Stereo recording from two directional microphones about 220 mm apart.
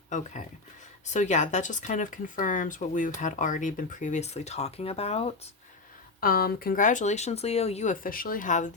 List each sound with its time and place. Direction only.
1.0 s speech: 35° left (ahead or behind)
6.1 s speech: 45° left (ahead or behind)